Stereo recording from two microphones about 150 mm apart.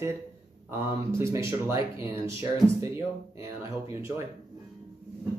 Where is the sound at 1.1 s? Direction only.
20° right (ahead or behind).